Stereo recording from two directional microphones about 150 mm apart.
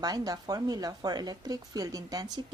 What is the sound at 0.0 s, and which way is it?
Speech, 25° right (ahead or behind).